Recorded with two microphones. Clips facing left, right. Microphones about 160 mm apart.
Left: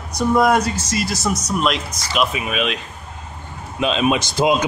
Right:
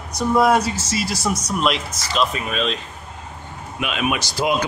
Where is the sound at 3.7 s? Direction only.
30° left (ahead or behind).